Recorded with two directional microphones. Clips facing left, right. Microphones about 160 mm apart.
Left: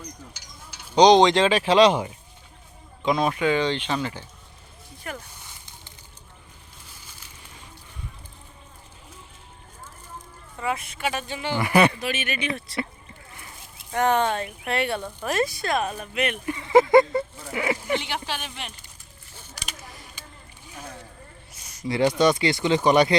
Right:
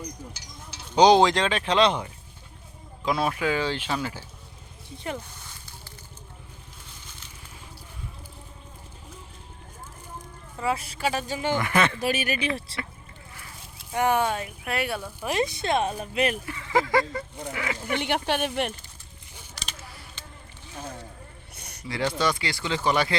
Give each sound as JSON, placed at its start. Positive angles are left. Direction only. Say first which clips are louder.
{"t": 0.9, "sound": "speech", "louder": "left 2 dB", "side_deg": -10}
{"t": 10.6, "sound": "speech", "louder": "right 1 dB", "side_deg": -30}
{"t": 11.6, "sound": "speech", "louder": "left 9 dB", "side_deg": 15}
{"t": 11.9, "sound": "speech", "louder": "right 2 dB", "side_deg": -40}
{"t": 13.9, "sound": "speech", "louder": "left 2 dB", "side_deg": -10}
{"t": 15.2, "sound": "speech", "louder": "even", "side_deg": -15}
{"t": 16.5, "sound": "speech", "louder": "left 8 dB", "side_deg": 20}
{"t": 17.9, "sound": "speech", "louder": "right 2 dB", "side_deg": -55}
{"t": 19.5, "sound": "a sound", "louder": "left 1 dB", "side_deg": 10}
{"t": 21.5, "sound": "a sound", "louder": "right 3 dB", "side_deg": -60}
{"t": 21.8, "sound": "speech", "louder": "left 6 dB", "side_deg": 20}